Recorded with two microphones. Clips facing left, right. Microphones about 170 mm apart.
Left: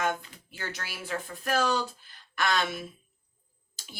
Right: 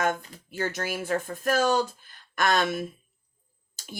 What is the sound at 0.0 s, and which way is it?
Speech, 45° right (ahead or behind).